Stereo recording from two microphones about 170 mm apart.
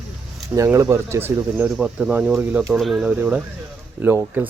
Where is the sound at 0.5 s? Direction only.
20° right (ahead or behind).